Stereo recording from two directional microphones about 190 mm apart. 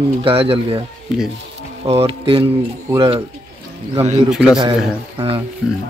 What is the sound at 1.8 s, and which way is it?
Speech, 30° right (ahead or behind).